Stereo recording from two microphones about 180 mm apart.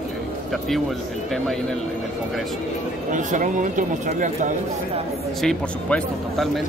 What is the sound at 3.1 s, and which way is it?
Speech, 45° right (ahead or behind).